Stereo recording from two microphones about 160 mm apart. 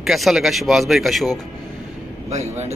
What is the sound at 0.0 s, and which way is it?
Speech, centre (ahead or behind).